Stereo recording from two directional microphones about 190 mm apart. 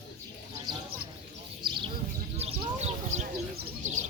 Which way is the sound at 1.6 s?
25° right (ahead or behind).